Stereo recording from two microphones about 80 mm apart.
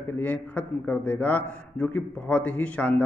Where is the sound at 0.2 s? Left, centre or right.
Centre.